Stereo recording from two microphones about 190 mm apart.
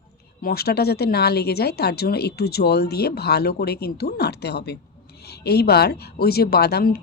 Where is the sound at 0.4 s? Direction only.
55° left (ahead or behind).